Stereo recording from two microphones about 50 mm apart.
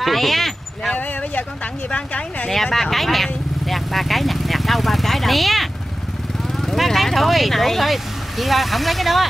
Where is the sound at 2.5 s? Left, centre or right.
Centre.